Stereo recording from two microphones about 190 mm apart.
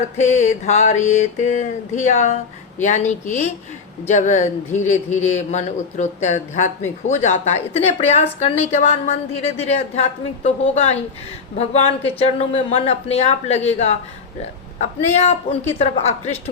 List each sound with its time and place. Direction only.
0.2 s a woman's voice: 35° left (ahead or behind)